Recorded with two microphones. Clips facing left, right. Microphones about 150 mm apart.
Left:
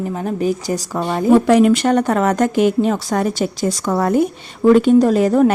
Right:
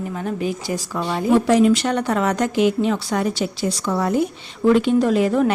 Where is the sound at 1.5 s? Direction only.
60° left (ahead or behind); by 5.5 s 40° left (ahead or behind).